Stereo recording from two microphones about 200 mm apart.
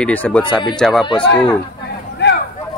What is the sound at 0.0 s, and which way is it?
Speech, 5° left (ahead or behind).